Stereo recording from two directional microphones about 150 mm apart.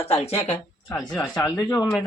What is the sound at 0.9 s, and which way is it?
Speech, 25° left (ahead or behind).